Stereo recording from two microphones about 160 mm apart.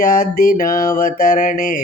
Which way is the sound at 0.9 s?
50° left (ahead or behind).